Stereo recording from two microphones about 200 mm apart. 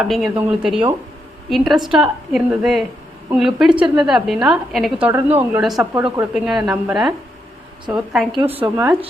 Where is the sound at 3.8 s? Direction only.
25° right (ahead or behind).